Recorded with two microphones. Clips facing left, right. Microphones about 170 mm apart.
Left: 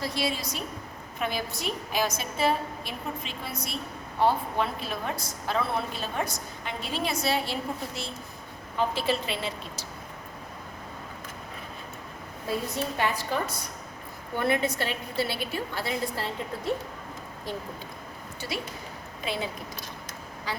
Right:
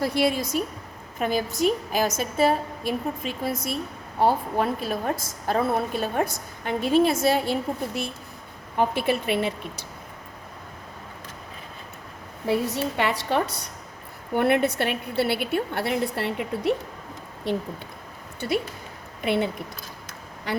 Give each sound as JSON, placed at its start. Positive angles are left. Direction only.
{"t": 0.0, "sound": "a woman's voice", "side_deg": -55}
{"t": 12.5, "sound": "a woman's voice", "side_deg": -75}
{"t": 14.3, "sound": "a woman's voice", "side_deg": -65}
{"t": 18.3, "sound": "a woman's voice", "side_deg": -55}